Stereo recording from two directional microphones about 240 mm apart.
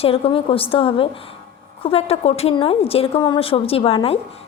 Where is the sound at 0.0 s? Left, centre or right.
Left.